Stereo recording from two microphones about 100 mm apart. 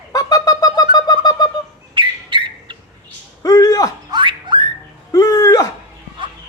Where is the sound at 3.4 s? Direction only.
40° left (ahead or behind).